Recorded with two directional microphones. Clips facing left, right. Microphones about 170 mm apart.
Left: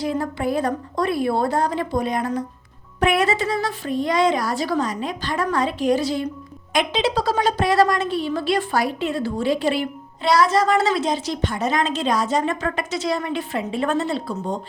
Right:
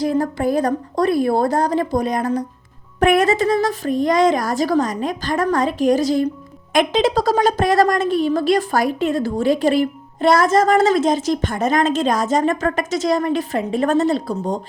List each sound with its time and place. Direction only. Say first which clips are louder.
0.0 s a woman's voice: right 5 dB; 40° right (ahead or behind)